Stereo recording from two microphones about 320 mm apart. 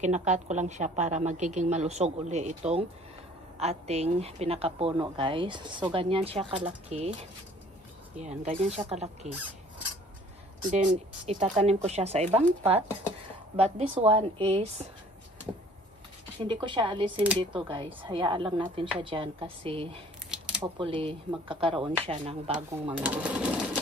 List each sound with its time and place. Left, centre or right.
0.0 s a woman's voice: right
8.2 s a woman's voice: right
11.2 s a woman's voice: right
16.5 s a woman's voice: centre
20.2 s a sound: centre
20.7 s a woman's voice: centre
23.0 s speech: centre